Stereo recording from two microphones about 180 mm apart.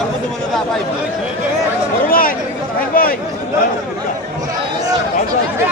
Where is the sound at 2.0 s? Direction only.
50° left (ahead or behind).